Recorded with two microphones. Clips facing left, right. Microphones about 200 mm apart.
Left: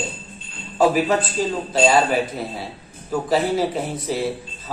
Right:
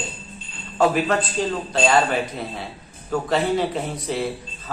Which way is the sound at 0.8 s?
5° left (ahead or behind).